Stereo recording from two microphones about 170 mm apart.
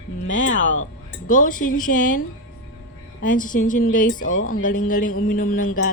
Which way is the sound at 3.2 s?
50° left (ahead or behind).